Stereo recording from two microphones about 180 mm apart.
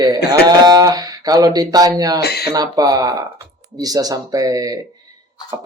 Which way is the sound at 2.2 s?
65° left (ahead or behind).